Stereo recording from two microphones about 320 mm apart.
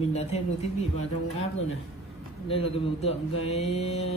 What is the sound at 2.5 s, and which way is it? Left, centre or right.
Speech, centre.